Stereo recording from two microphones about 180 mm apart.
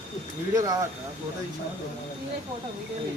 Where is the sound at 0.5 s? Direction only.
20° right (ahead or behind).